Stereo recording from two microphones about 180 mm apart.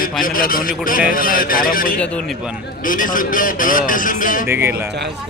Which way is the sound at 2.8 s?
50° left (ahead or behind).